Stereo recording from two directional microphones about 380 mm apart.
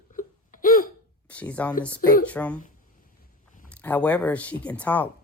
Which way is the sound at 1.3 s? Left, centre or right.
Centre.